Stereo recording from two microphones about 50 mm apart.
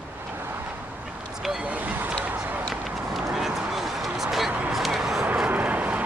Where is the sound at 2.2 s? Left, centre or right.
Right.